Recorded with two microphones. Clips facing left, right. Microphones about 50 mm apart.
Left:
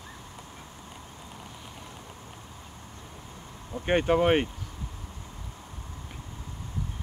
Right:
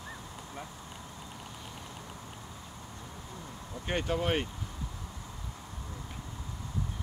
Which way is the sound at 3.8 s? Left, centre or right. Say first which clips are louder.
Left 8 dB; left.